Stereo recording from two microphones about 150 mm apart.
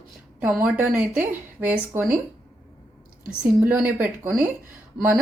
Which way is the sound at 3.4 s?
10° right (ahead or behind).